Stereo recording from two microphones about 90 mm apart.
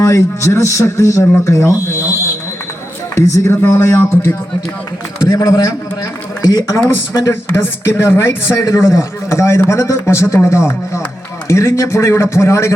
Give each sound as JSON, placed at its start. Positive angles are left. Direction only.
{"t": 0.0, "sound": "speech", "side_deg": 35}
{"t": 3.2, "sound": "speech", "side_deg": 35}
{"t": 5.3, "sound": "a man's voice", "side_deg": 40}
{"t": 6.7, "sound": "speech", "side_deg": 35}